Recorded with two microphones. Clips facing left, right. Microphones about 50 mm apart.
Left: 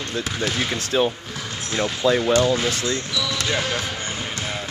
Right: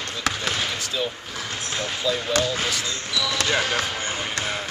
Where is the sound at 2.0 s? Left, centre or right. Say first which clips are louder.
Left 6 dB; left.